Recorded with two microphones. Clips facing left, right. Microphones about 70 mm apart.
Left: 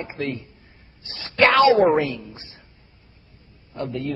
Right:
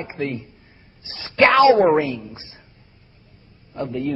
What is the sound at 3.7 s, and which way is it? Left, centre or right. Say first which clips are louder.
Speech: right 2 dB; centre.